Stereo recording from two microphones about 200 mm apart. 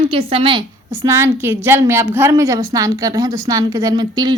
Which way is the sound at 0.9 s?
15° right (ahead or behind).